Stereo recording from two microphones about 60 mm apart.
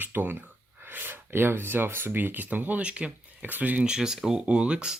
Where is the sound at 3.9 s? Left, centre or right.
Centre.